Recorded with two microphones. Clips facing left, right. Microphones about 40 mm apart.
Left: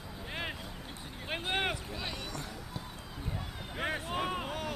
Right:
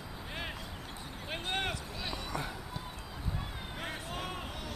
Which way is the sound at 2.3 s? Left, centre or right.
Centre.